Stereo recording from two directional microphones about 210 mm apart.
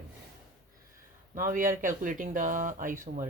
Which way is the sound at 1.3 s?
40° right (ahead or behind).